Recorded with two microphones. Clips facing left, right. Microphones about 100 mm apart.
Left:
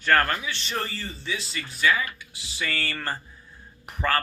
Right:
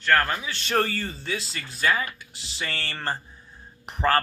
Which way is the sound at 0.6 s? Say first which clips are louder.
Right 6 dB; 60° right (ahead or behind).